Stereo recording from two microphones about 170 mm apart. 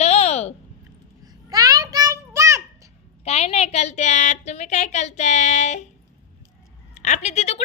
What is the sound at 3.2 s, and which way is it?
A woman's voice, 40° left (ahead or behind).